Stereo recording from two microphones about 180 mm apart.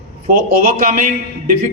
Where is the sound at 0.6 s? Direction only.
50° right (ahead or behind).